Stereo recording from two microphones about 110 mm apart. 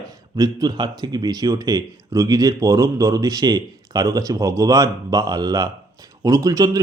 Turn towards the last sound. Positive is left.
turn(degrees=-35)  # may be behind; listen again after turning